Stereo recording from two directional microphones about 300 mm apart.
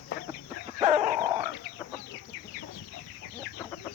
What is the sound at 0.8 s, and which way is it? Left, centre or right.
Dog, centre.